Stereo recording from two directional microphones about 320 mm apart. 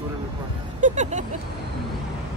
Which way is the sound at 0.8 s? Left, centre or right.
Right.